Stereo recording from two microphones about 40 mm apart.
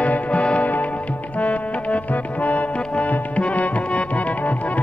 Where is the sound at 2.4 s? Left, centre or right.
Left.